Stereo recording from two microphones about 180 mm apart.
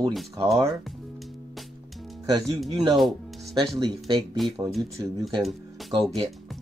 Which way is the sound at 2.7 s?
25° right (ahead or behind).